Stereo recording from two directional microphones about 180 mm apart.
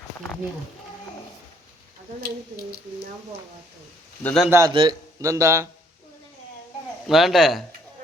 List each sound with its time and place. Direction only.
4.2 s a man's voice: 10° left (ahead or behind)
4.4 s a man's voice: 15° right (ahead or behind)
7.1 s speech: centre (ahead or behind)